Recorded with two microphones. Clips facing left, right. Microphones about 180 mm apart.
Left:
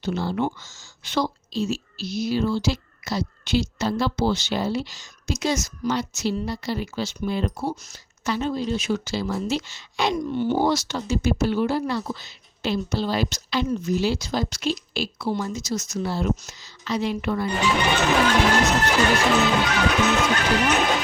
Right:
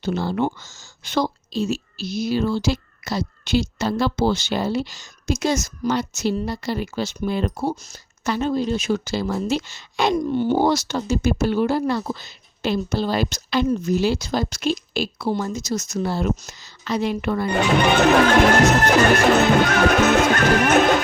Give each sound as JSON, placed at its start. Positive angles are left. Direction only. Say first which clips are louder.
{"t": 0.0, "sound": "speech", "louder": "right 2 dB", "side_deg": -50}